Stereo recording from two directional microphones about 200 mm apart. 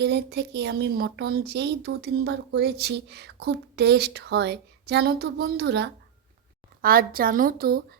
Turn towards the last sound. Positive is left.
turn(degrees=-50)  # may be behind; listen again after turning